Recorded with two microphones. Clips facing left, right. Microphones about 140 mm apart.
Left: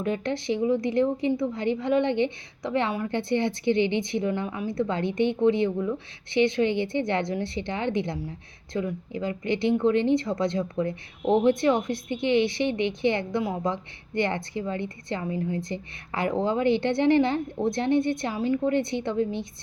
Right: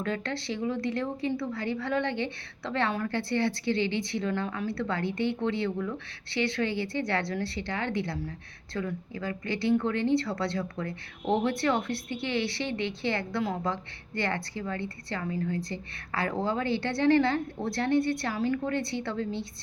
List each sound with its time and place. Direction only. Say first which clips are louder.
0.0 s speech: left 5 dB; 20° left (ahead or behind)